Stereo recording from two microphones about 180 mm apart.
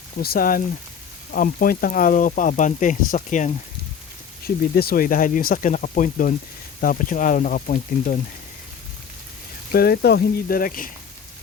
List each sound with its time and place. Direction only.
0.2 s speech: 55° left (ahead or behind)
4.4 s speech: 60° left (ahead or behind)
9.7 s speech: 60° left (ahead or behind)